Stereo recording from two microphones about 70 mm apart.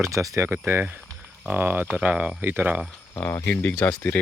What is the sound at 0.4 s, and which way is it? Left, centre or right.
Speech, right.